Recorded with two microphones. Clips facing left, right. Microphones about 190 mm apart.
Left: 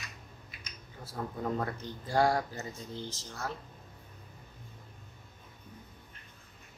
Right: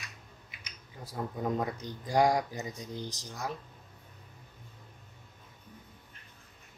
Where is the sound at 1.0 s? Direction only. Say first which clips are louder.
Right 2 dB; 15° right (ahead or behind).